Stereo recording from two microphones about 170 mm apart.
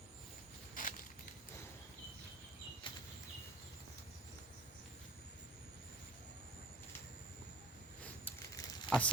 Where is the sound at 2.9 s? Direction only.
30° left (ahead or behind).